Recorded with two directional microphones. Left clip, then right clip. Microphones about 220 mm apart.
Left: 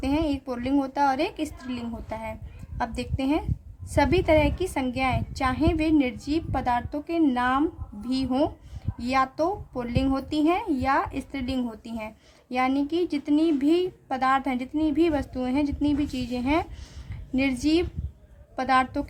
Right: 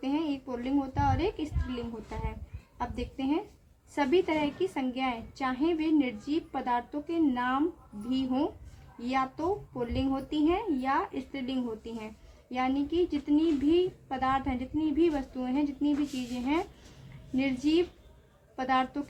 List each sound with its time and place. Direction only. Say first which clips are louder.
0.0 s speech: left 6 dB; 50° left (ahead or behind)